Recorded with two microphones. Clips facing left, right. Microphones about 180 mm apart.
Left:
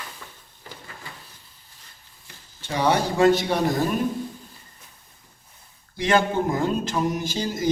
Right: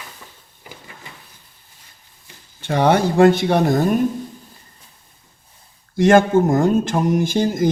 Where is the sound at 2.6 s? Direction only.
55° right (ahead or behind).